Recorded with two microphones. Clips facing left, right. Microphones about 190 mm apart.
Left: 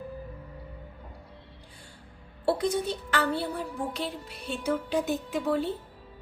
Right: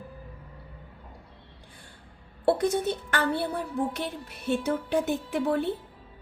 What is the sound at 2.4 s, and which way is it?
Speech, 55° right (ahead or behind).